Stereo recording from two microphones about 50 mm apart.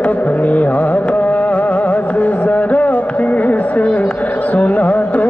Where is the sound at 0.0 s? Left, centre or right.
Left.